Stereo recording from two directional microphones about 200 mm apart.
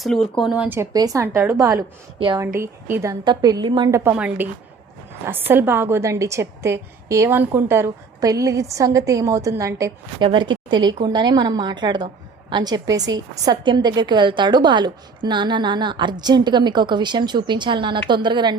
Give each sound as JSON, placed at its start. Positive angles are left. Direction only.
{"t": 0.0, "sound": "a woman's voice", "side_deg": 0}
{"t": 2.6, "sound": "a woman's voice", "side_deg": -10}
{"t": 5.5, "sound": "a woman's voice", "side_deg": -10}